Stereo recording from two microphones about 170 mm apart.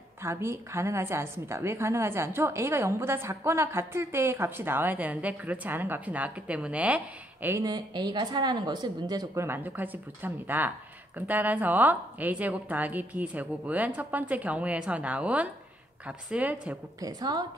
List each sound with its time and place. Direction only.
0.2 s a woman's voice: 15° right (ahead or behind)
7.4 s a woman's voice: 20° right (ahead or behind)
17.0 s speech: 25° right (ahead or behind)